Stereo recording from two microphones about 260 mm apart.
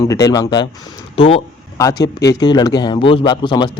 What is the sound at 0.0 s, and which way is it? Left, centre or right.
Speech, centre.